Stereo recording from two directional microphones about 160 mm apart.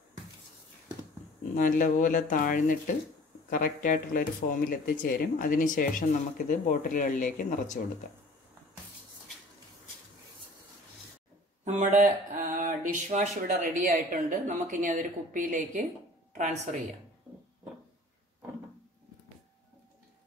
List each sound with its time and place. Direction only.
1.5 s speech: 55° left (ahead or behind)
11.6 s speech: 50° right (ahead or behind)
16.3 s speech: 45° right (ahead or behind)